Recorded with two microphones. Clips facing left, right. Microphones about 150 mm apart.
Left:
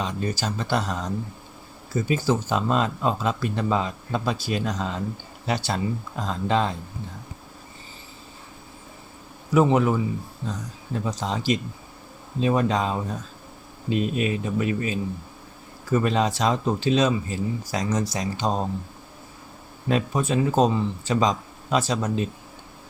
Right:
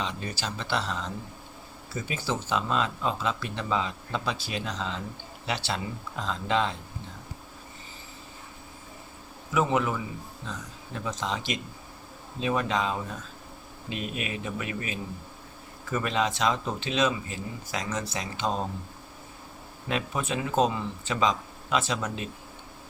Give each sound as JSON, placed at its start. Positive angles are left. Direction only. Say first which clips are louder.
{"t": 0.0, "sound": "speech", "louder": "left 6 dB", "side_deg": 45}
{"t": 9.5, "sound": "speech", "louder": "left 7 dB", "side_deg": 40}
{"t": 19.9, "sound": "speech", "louder": "left 7 dB", "side_deg": 40}